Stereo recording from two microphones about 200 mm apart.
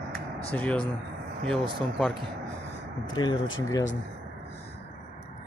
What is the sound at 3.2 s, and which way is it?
Speech, 20° left (ahead or behind).